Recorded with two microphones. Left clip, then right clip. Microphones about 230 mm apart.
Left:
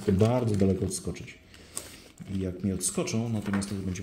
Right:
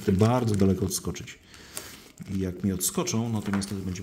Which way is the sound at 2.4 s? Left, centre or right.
Centre.